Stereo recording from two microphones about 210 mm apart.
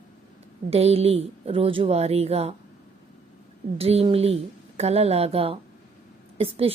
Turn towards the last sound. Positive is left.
turn(degrees=-25)  # may be behind; listen again after turning